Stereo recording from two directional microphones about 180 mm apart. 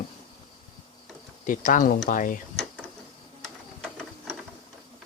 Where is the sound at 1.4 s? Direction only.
45° left (ahead or behind).